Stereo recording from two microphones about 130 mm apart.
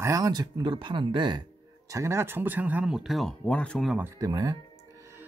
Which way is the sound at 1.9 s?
20° right (ahead or behind).